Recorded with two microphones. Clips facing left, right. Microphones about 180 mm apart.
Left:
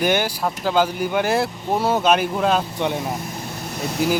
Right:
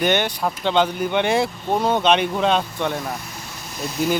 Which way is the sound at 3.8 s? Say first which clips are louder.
Left 1 dB; 70° left (ahead or behind).